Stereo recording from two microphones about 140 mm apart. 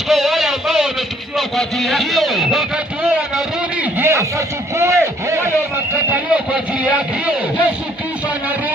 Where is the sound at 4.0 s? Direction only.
20° right (ahead or behind).